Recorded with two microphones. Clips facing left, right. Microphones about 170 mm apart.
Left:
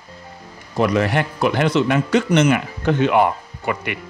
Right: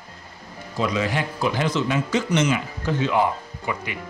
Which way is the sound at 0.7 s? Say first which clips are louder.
Left 6 dB; 65° left (ahead or behind).